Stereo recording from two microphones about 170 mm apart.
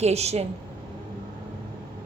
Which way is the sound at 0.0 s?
40° right (ahead or behind).